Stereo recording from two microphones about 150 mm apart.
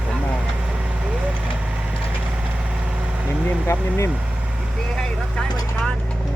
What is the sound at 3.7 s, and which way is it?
Speech, 15° left (ahead or behind).